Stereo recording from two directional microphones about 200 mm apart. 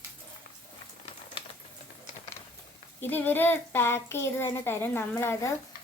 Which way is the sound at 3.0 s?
10° left (ahead or behind).